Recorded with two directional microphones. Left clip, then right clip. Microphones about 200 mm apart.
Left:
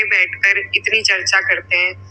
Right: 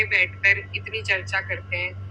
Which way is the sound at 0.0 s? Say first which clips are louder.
Left 6 dB; 50° left (ahead or behind).